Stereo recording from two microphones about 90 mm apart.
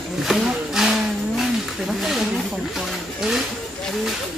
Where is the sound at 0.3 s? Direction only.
5° right (ahead or behind).